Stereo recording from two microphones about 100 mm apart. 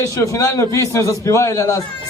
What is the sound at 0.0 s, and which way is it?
Speech, 30° left (ahead or behind).